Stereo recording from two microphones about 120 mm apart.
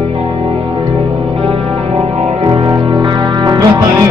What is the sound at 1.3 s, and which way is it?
Music, 55° right (ahead or behind).